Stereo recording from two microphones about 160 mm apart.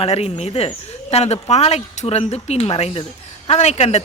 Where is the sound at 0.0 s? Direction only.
40° left (ahead or behind).